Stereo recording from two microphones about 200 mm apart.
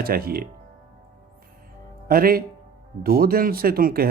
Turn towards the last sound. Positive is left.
turn(degrees=-45)  # may be behind; listen again after turning